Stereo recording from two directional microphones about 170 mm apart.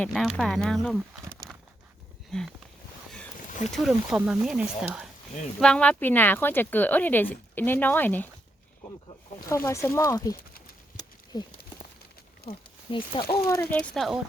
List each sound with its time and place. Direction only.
0.0 s speech: centre (ahead or behind)
2.3 s speech: 5° left (ahead or behind)
3.7 s speech: centre (ahead or behind)
9.5 s speech: 15° left (ahead or behind)
11.3 s speech: 25° left (ahead or behind)
13.3 s speech: 10° left (ahead or behind)